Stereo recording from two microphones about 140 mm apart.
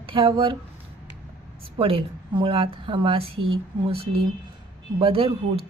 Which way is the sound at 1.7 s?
40° right (ahead or behind).